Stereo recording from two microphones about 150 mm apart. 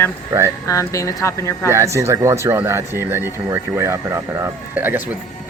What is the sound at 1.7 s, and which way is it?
Speech, 20° right (ahead or behind).